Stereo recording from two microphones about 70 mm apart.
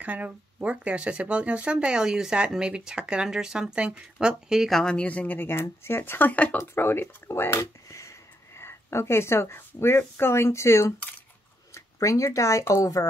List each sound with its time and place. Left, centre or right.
0.0 s speech: right
4.6 s speech: centre
4.9 s speech: centre
6.6 s speech: left